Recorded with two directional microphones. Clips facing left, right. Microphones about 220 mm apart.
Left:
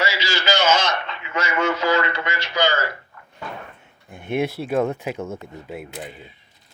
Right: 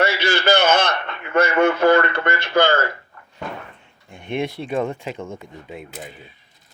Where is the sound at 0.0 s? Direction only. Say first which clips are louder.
Right 5 dB; 60° right (ahead or behind).